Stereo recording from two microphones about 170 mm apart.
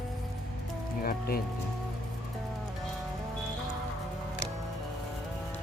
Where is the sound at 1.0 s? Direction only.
60° left (ahead or behind).